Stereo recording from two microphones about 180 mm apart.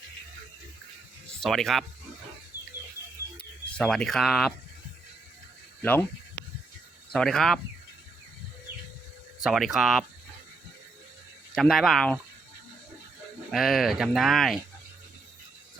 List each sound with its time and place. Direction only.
1.4 s speech: centre (ahead or behind)
3.3 s speech: 5° left (ahead or behind)
5.8 s speech: 10° left (ahead or behind)
7.1 s speech: centre (ahead or behind)
9.4 s speech: centre (ahead or behind)
11.5 s speech: centre (ahead or behind)
13.5 s speech: centre (ahead or behind)